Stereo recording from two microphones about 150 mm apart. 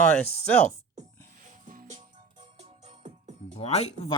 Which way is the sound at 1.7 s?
55° right (ahead or behind).